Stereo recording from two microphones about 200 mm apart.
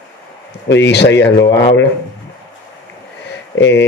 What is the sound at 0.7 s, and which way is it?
Speech, 60° left (ahead or behind).